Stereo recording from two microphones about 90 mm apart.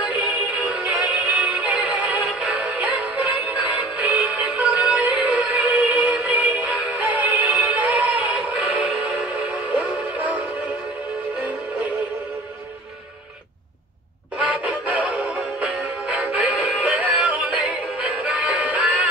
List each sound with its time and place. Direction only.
0.6 s music: 15° right (ahead or behind)
6.6 s synthetic singing: 15° right (ahead or behind)
8.7 s music: 15° right (ahead or behind)
14.4 s synthetic singing: 15° right (ahead or behind)
17.1 s music: 15° right (ahead or behind)